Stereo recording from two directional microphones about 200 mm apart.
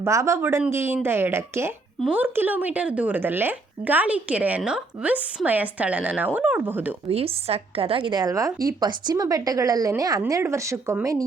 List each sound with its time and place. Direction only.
0.0 s a woman's voice: 15° right (ahead or behind)
7.1 s a woman's voice: 30° right (ahead or behind)